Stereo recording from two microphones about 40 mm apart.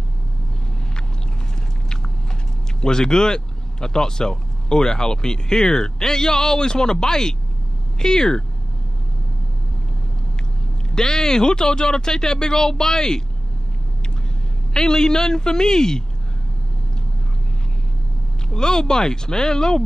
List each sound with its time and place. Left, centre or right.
2.8 s speech: centre
11.0 s speech: centre
14.7 s speech: centre
18.5 s speech: centre